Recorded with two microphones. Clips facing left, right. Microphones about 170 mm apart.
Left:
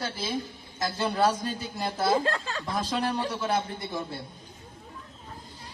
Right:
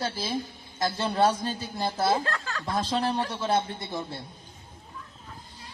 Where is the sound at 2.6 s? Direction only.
25° right (ahead or behind).